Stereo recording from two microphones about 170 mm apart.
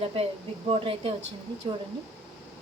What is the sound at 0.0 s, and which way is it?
A woman's voice, 35° right (ahead or behind).